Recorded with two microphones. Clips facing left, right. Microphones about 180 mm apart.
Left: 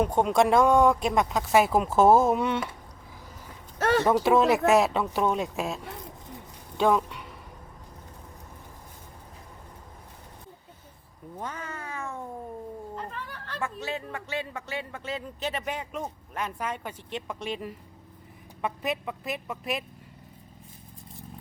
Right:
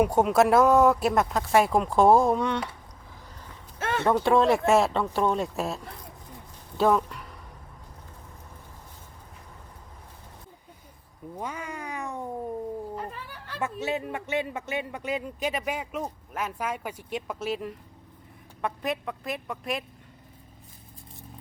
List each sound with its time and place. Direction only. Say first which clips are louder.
0.0 s speech: right 2 dB; 10° right (ahead or behind); by 2.6 s 5° left (ahead or behind)
3.8 s a sound: left 6 dB; 40° left (ahead or behind)
4.1 s speech: right 3 dB; 5° left (ahead or behind)
6.7 s music: right 1 dB; centre (ahead or behind)
11.3 s cat: right 2 dB; 10° right (ahead or behind)
13.0 s speech: even; 10° right (ahead or behind)